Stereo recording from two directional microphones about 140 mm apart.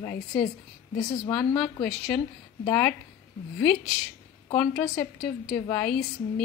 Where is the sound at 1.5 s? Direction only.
5° left (ahead or behind).